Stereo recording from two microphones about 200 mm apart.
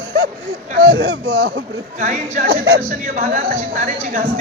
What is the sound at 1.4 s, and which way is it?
A woman's voice, 40° right (ahead or behind).